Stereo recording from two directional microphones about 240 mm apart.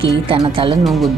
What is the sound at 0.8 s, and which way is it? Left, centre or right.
Speech, centre.